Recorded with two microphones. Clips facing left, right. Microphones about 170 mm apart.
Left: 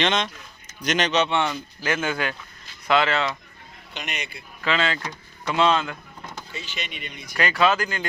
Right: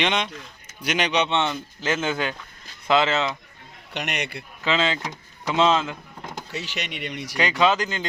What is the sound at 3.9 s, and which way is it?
Speech, 70° right (ahead or behind).